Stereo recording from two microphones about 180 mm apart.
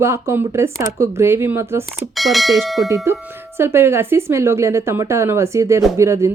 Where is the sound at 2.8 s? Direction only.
20° right (ahead or behind).